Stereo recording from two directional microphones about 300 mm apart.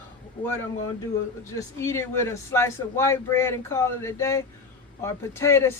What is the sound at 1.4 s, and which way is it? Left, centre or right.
Speech, centre.